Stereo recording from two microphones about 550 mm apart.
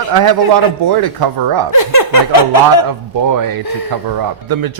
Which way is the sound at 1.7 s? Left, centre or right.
Left.